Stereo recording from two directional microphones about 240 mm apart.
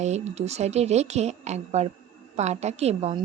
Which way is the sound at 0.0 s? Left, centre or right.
Right.